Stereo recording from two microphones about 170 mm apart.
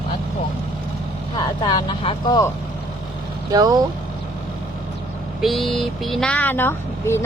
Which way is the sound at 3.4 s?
20° right (ahead or behind).